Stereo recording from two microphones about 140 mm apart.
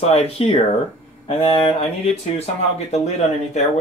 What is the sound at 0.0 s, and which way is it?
Speech, 45° left (ahead or behind).